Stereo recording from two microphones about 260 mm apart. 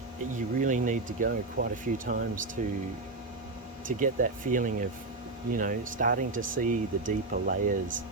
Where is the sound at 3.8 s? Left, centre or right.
Right.